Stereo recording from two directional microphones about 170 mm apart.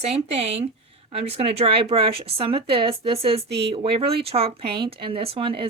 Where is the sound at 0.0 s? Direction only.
40° right (ahead or behind).